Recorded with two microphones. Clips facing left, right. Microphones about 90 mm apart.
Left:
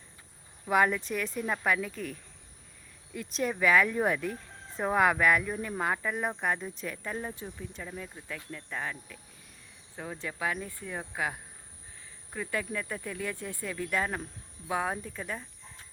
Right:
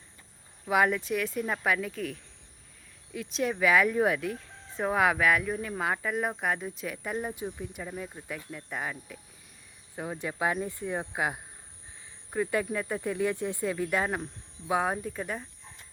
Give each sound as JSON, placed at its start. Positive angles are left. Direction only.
{"t": 0.6, "sound": "speech", "side_deg": -5}